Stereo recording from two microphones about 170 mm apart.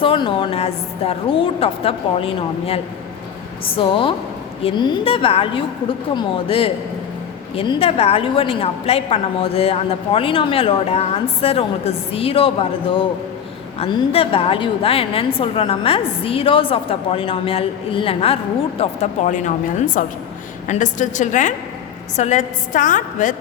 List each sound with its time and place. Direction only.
0.0 s a woman's voice: 30° left (ahead or behind)
13.7 s a woman's voice: 35° left (ahead or behind)